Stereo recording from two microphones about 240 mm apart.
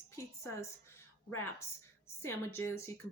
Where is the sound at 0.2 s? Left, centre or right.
Centre.